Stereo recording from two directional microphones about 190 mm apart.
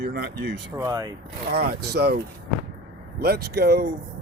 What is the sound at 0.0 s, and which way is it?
Speech, 60° right (ahead or behind).